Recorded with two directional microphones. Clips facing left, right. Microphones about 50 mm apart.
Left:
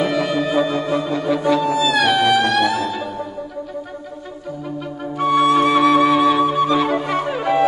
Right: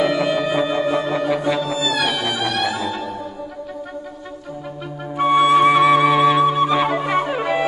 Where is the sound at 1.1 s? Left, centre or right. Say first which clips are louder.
Even; centre.